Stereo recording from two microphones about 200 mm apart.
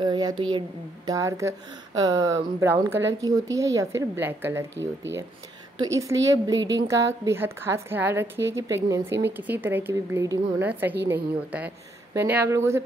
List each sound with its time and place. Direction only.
0.0 s a woman's voice: 20° right (ahead or behind)